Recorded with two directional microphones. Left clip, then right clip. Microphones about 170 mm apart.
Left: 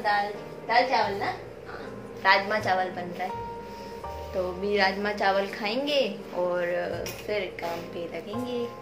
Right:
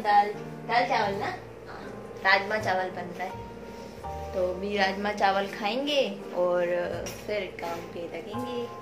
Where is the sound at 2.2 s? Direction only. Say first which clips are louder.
Left 1 dB; 5° left (ahead or behind).